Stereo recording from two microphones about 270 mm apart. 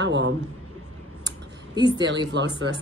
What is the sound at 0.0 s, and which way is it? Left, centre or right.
Speech, right.